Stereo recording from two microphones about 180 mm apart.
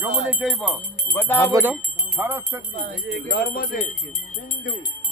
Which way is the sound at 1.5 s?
10° right (ahead or behind).